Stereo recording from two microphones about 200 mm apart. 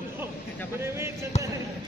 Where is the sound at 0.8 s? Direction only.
15° right (ahead or behind).